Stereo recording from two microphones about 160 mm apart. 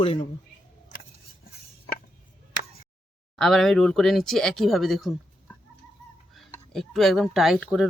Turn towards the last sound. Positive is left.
turn(degrees=0)  # may be behind; listen again after turning